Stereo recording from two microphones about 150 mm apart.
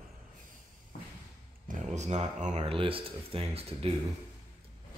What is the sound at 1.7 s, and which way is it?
Speech, 50° right (ahead or behind).